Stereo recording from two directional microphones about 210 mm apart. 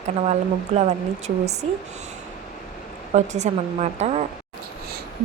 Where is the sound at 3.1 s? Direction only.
35° right (ahead or behind).